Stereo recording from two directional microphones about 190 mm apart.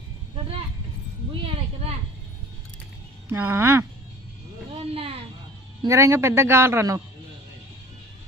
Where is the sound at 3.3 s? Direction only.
10° right (ahead or behind).